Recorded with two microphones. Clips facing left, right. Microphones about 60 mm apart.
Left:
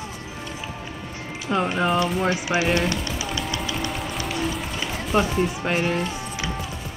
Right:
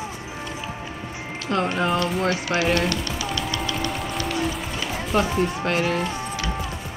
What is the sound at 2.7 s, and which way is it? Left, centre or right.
Speech, centre.